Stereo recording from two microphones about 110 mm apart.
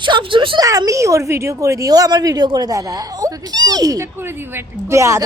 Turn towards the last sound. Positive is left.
turn(degrees=-25)  # may be behind; listen again after turning